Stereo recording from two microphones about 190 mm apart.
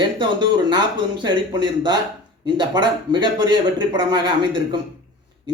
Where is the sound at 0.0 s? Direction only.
25° right (ahead or behind).